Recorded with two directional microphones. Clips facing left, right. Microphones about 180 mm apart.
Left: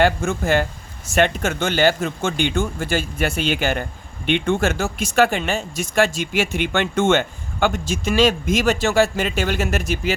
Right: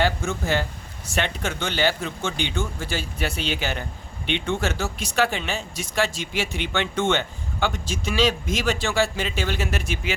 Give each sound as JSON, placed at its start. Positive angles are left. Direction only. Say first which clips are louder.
{"t": 0.0, "sound": "speech", "louder": "left 5 dB", "side_deg": 50}